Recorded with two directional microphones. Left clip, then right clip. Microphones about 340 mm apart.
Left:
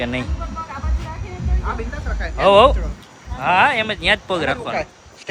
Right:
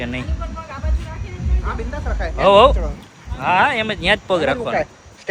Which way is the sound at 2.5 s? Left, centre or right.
Centre.